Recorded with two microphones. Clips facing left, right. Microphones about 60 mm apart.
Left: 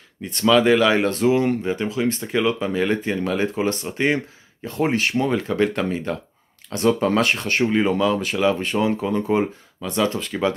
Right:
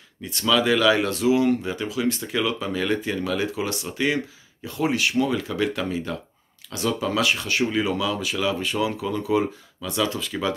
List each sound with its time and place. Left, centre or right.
0.2 s speech: left